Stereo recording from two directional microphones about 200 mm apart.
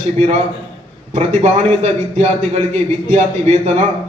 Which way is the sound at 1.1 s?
35° right (ahead or behind).